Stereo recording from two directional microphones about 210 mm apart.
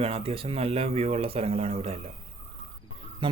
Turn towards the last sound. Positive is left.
turn(degrees=-25)  # may be behind; listen again after turning